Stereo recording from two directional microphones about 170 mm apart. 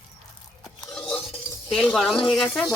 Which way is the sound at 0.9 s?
5° left (ahead or behind).